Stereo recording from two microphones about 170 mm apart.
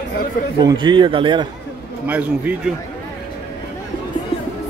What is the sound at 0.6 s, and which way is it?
Speech, 25° right (ahead or behind).